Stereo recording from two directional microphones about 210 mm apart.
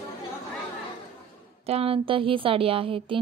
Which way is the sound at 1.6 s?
30° right (ahead or behind).